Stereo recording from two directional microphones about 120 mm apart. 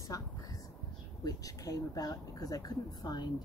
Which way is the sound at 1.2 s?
30° left (ahead or behind).